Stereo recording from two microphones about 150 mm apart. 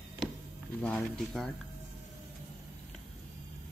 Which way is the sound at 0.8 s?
5° left (ahead or behind).